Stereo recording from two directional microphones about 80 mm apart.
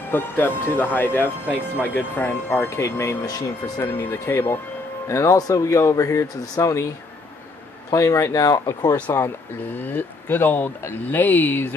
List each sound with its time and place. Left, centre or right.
0.1 s speech: left
3.3 s speech: left
4.1 s speech: left
7.9 s speech: left
9.8 s speech: left